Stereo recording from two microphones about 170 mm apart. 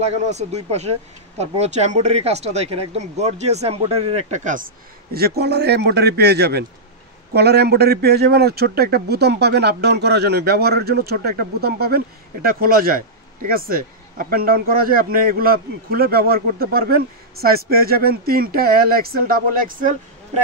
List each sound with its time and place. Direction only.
0.0 s speech: 40° right (ahead or behind)
5.1 s a man's voice: 65° right (ahead or behind)